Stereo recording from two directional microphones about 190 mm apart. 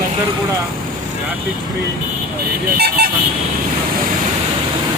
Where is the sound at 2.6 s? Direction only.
55° right (ahead or behind).